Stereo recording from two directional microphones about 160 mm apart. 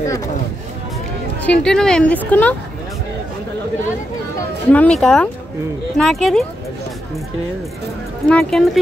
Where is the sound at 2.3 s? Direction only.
10° left (ahead or behind).